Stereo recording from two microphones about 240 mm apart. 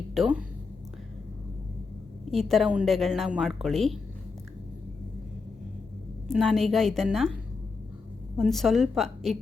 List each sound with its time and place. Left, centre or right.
0.1 s speech: centre
2.3 s a woman's voice: centre
6.2 s a woman's voice: centre
8.4 s a woman's voice: centre